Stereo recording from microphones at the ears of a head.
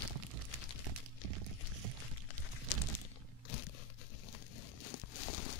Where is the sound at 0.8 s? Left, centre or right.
Right.